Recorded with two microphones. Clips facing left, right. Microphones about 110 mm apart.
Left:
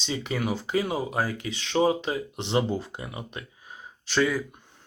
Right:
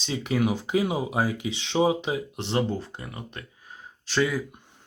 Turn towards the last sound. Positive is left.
turn(degrees=0)  # may be behind; listen again after turning